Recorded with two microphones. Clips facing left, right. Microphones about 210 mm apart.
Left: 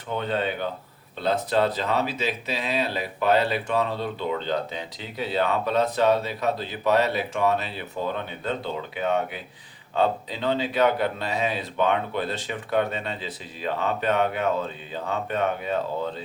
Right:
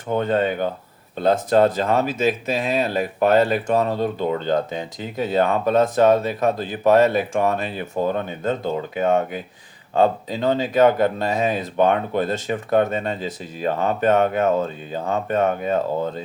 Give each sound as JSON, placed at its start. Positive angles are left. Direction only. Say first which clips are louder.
{"t": 0.1, "sound": "speech", "louder": "right 6 dB", "side_deg": -45}